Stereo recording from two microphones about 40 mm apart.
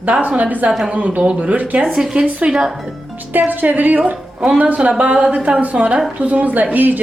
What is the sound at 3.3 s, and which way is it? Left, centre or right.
A woman's voice, right.